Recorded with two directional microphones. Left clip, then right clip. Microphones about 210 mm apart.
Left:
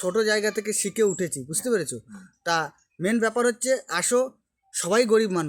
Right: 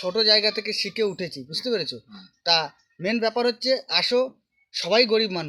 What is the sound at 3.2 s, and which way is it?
Speech, 60° left (ahead or behind).